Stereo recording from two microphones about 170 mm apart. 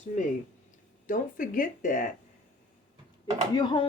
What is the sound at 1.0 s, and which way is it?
Speech, 50° left (ahead or behind).